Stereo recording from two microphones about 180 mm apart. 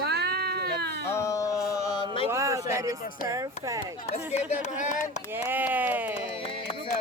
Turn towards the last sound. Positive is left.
turn(degrees=30)  # may be behind; listen again after turning